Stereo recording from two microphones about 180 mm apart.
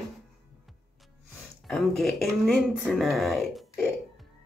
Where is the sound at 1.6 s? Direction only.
Centre (ahead or behind).